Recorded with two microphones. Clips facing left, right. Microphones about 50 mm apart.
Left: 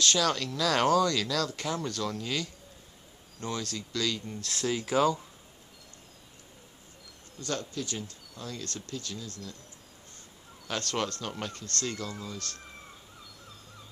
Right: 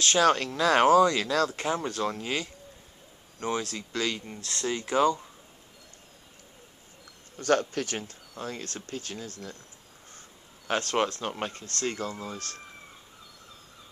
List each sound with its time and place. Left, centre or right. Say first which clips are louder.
0.0 s speech: right 5 dB; right
4.5 s speech: even; centre
7.3 s speech: right 9 dB; right
10.7 s speech: right 5 dB; right